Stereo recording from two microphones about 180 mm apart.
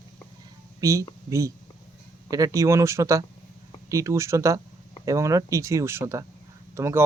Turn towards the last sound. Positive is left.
turn(degrees=-15)  # may be behind; listen again after turning